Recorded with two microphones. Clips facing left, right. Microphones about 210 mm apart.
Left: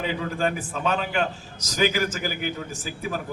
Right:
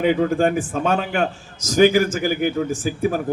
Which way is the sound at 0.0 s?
55° right (ahead or behind).